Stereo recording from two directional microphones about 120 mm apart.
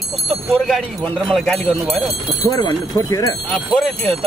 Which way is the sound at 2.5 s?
30° left (ahead or behind).